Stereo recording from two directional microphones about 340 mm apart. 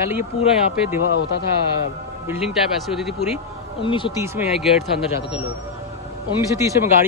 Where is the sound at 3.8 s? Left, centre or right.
Centre.